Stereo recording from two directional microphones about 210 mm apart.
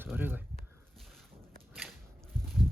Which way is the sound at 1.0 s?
Centre (ahead or behind).